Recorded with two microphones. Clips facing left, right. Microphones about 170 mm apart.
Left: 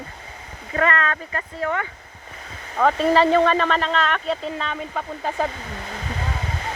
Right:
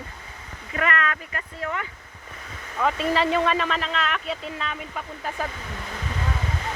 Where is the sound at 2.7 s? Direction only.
40° left (ahead or behind).